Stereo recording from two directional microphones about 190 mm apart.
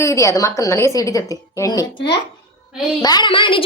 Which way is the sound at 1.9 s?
65° left (ahead or behind).